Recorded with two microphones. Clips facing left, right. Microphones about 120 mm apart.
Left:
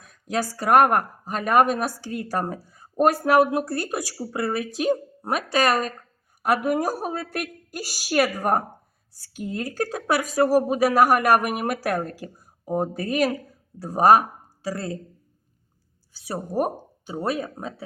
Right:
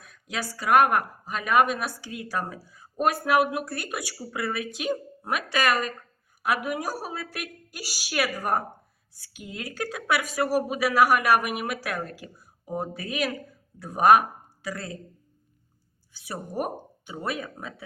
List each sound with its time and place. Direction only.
0.0 s speech: 40° left (ahead or behind)
6.7 s speech: 45° left (ahead or behind); by 14.9 s 30° left (ahead or behind)
16.1 s speech: 35° left (ahead or behind)